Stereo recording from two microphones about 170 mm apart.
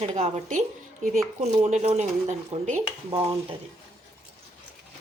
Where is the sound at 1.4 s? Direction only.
40° right (ahead or behind).